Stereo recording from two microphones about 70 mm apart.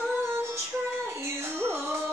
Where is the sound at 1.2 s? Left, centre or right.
Right.